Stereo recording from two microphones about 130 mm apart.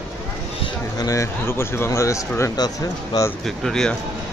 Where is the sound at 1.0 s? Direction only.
25° left (ahead or behind).